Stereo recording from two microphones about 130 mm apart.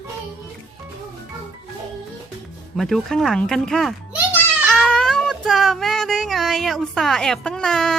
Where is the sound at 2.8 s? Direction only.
Centre (ahead or behind).